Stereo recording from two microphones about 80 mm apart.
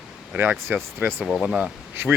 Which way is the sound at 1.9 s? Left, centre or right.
Right.